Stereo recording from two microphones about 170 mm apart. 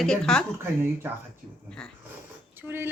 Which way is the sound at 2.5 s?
10° right (ahead or behind).